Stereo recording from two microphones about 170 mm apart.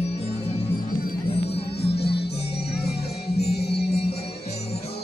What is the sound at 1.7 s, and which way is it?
Music, 75° left (ahead or behind).